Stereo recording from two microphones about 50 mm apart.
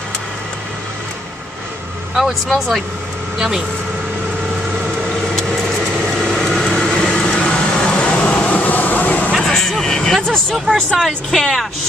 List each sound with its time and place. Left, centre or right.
2.1 s speech: centre
5.5 s vehicle: centre
6.8 s vehicle: centre; by 9.3 s left
9.4 s vehicle: centre
11.0 s speech: centre